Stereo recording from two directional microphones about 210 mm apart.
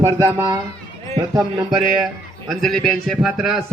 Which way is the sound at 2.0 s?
Centre (ahead or behind).